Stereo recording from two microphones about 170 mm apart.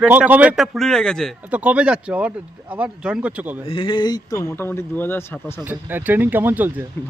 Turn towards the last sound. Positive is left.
turn(degrees=-10)  # may be behind; listen again after turning